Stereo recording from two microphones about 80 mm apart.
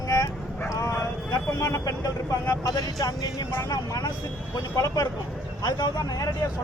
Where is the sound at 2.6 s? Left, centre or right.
Left.